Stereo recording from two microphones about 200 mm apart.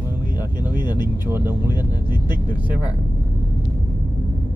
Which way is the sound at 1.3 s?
10° right (ahead or behind).